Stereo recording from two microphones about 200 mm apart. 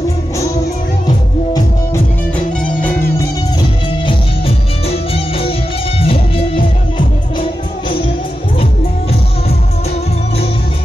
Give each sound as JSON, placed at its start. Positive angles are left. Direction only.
{"t": 2.3, "sound": "music", "side_deg": 10}
{"t": 4.0, "sound": "music", "side_deg": 30}